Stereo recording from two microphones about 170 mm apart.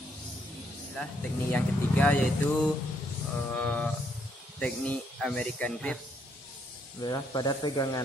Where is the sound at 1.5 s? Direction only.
10° left (ahead or behind).